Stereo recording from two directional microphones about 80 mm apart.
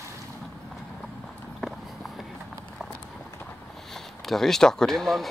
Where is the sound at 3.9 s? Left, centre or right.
Centre.